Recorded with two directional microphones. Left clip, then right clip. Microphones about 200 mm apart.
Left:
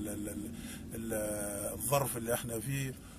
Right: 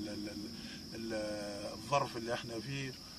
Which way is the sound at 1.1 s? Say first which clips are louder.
Left 3 dB; centre (ahead or behind).